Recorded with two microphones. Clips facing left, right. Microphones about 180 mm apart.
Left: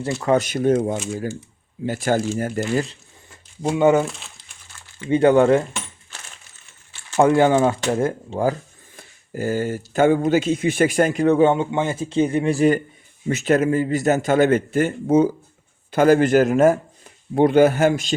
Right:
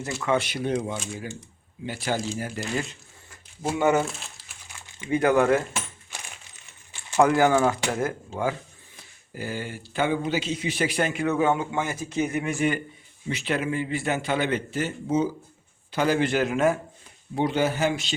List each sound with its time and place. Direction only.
0.0 s a man's voice: 35° left (ahead or behind)
3.6 s speech: 20° left (ahead or behind)
4.0 s crumpling: centre (ahead or behind)
5.0 s speech: 25° left (ahead or behind)
6.1 s a sound: 15° right (ahead or behind)
7.2 s speech: 25° left (ahead or behind)
9.0 s a man's voice: 45° left (ahead or behind)
17.3 s a man's voice: 55° left (ahead or behind)